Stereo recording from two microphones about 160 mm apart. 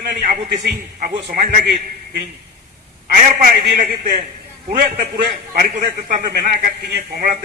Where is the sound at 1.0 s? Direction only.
65° right (ahead or behind).